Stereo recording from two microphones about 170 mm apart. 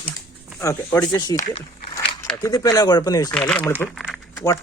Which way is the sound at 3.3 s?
5° left (ahead or behind).